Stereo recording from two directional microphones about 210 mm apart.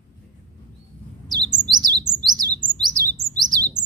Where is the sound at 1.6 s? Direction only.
20° right (ahead or behind).